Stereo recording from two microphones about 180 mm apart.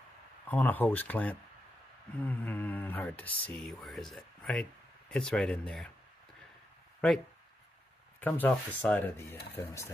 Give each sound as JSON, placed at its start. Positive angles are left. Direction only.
{"t": 0.5, "sound": "speech", "side_deg": 10}
{"t": 8.2, "sound": "speech", "side_deg": 10}